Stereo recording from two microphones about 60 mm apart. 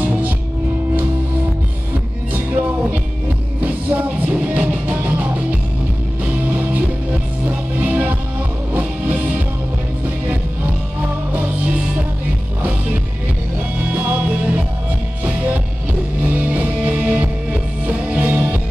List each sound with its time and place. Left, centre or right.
0.0 s music: right
2.3 s music: right
15.2 s music: right